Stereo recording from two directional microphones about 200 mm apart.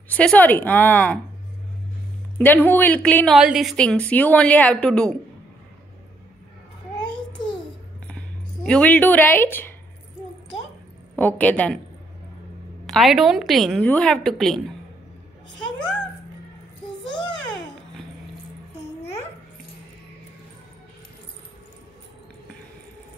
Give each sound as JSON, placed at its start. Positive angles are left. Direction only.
{"t": 0.1, "sound": "a woman's voice", "side_deg": 5}
{"t": 2.3, "sound": "a woman's voice", "side_deg": 10}
{"t": 7.1, "sound": "babbling", "side_deg": 25}
{"t": 8.6, "sound": "a woman's voice", "side_deg": 5}
{"t": 11.1, "sound": "a woman's voice", "side_deg": 10}
{"t": 12.8, "sound": "a woman's voice", "side_deg": 0}